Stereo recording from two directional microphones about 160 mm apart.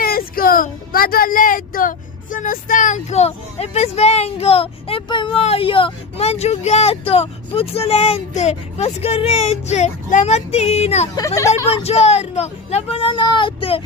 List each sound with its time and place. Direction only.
0.0 s speech: 65° left (ahead or behind); by 11.1 s 40° left (ahead or behind)
11.1 s speech: 20° left (ahead or behind)
11.7 s speech: 40° left (ahead or behind)